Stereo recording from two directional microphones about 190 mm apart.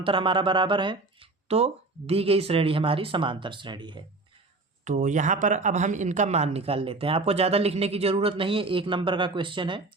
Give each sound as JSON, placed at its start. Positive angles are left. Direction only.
{"t": 0.0, "sound": "speech", "side_deg": -25}
{"t": 4.9, "sound": "speech", "side_deg": -40}